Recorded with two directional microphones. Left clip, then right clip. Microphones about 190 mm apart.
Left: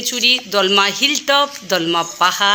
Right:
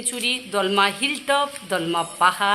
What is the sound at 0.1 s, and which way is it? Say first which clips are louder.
Speech: left 9 dB; 20° left (ahead or behind).